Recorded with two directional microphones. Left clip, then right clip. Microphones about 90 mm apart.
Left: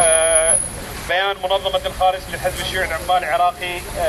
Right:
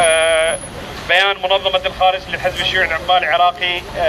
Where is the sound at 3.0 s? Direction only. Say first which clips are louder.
Right 2 dB; 45° left (ahead or behind).